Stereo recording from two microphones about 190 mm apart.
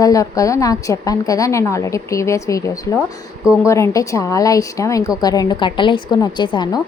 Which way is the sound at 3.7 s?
15° left (ahead or behind).